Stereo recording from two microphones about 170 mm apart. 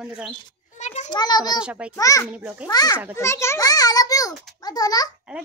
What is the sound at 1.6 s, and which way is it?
Speech, 5° right (ahead or behind).